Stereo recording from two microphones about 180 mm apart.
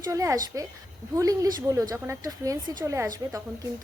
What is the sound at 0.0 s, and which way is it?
A woman's voice, 15° right (ahead or behind).